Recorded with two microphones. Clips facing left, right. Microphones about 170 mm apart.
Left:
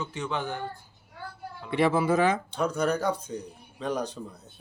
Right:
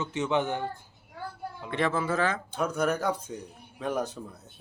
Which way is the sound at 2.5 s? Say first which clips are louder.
Left 1 dB; 5° right (ahead or behind).